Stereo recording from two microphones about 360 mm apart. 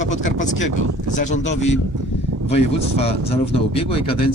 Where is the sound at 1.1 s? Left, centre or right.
Centre.